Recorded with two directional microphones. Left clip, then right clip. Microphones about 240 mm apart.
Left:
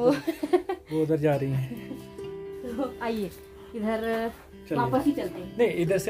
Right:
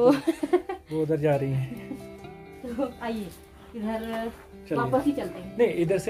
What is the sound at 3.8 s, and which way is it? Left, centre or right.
Speech, left.